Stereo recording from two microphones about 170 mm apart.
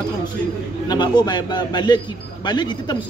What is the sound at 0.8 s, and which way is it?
A man's voice, 25° left (ahead or behind).